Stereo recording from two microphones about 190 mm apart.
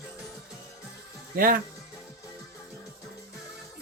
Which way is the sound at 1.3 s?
50° right (ahead or behind).